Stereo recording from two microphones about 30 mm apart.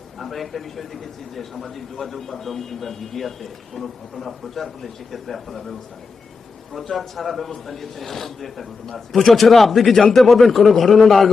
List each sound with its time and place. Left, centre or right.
0.2 s a man's voice: centre
6.9 s a man's voice: centre
9.9 s a man's voice: centre
10.2 s a man's voice: centre